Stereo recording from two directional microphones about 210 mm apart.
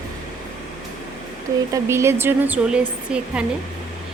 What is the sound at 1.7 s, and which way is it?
A woman's voice, 15° right (ahead or behind).